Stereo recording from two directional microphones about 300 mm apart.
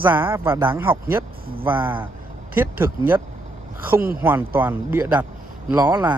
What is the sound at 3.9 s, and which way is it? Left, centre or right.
Speech, right.